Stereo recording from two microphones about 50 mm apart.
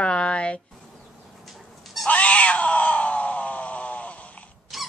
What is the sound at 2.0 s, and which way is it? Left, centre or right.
Cat, left.